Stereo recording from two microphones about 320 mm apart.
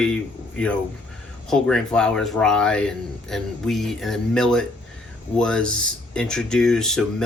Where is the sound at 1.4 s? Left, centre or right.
Centre.